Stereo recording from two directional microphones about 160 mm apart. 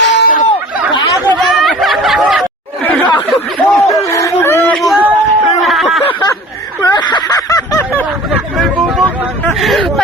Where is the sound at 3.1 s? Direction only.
30° left (ahead or behind).